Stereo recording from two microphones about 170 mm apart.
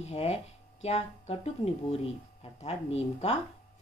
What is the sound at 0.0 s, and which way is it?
A woman's voice, 40° left (ahead or behind).